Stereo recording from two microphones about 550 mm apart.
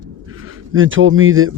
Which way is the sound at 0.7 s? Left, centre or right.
Right.